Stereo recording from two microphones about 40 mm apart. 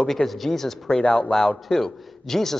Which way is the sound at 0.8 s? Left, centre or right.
Left.